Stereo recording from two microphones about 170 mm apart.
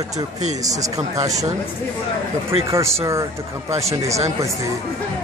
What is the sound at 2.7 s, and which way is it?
Speech, 15° right (ahead or behind).